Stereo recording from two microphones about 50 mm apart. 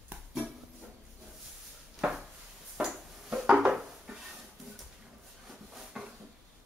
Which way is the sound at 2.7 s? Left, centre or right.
Centre.